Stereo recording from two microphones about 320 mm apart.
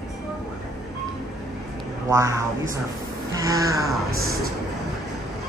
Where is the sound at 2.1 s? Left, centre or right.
Centre.